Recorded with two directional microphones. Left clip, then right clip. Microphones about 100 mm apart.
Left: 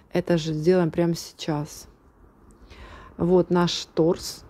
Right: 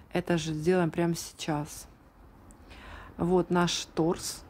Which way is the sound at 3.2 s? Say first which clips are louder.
Left 6 dB; 20° left (ahead or behind).